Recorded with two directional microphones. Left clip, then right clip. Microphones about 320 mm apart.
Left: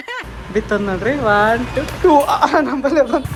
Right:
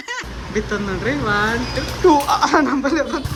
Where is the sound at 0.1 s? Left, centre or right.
Centre.